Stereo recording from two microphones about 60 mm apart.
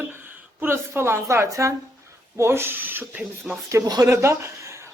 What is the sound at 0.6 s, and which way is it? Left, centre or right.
Speech, right.